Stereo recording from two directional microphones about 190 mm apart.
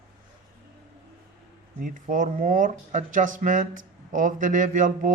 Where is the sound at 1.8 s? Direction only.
45° right (ahead or behind).